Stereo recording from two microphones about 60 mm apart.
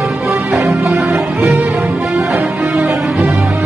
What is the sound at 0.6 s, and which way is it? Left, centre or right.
Music, centre.